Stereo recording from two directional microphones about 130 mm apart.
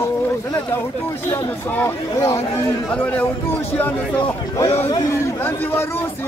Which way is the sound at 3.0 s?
10° left (ahead or behind).